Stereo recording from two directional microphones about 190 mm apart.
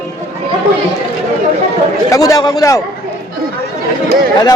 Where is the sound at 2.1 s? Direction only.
20° left (ahead or behind).